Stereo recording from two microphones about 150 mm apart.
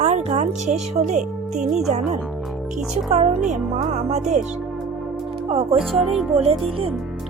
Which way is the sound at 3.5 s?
55° right (ahead or behind).